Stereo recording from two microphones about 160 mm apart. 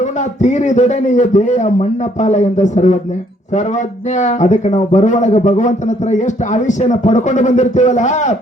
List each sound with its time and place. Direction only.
0.4 s a man's voice: 50° left (ahead or behind)
4.2 s a man's voice: 45° left (ahead or behind)